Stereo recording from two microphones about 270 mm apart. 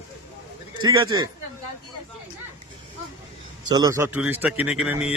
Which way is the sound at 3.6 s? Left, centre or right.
Centre.